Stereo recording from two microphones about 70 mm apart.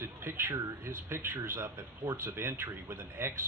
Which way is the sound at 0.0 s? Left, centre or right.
Right.